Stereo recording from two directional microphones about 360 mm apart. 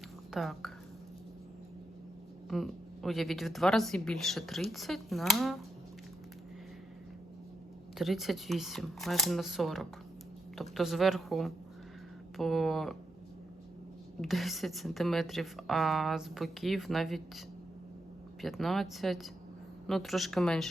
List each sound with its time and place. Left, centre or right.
0.3 s speech: centre
2.5 s speech: centre
7.9 s speech: centre
14.2 s speech: centre
18.4 s speech: centre